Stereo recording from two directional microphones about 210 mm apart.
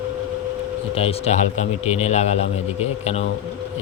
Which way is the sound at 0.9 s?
25° left (ahead or behind).